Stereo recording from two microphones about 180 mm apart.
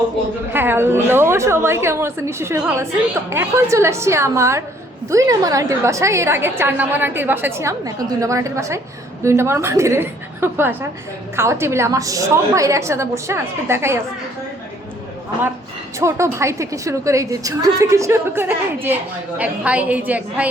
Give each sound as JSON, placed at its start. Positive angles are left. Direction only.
{"t": 0.5, "sound": "a woman's voice", "side_deg": -10}
{"t": 16.0, "sound": "a woman's voice", "side_deg": -15}